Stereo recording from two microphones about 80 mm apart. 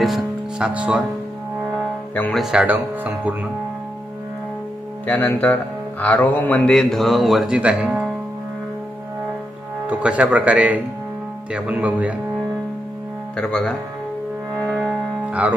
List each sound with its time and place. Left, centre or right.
0.0 s music: centre
0.7 s speech: centre
2.3 s speech: centre
2.6 s speech: right
5.0 s speech: left
6.7 s speech: centre
9.8 s speech: centre
13.4 s speech: centre
14.8 s music: centre